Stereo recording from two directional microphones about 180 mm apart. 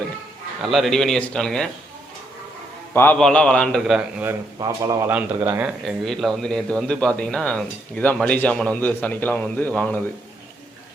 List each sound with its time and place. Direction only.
0.6 s a man's voice: centre (ahead or behind)
2.9 s a man's voice: 10° left (ahead or behind); by 4.4 s 5° right (ahead or behind)
4.6 s speech: 20° right (ahead or behind)
5.8 s a man's voice: centre (ahead or behind)